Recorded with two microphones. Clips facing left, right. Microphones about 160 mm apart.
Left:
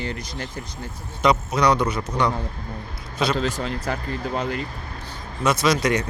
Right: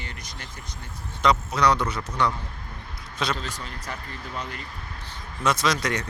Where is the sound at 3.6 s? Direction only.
60° left (ahead or behind).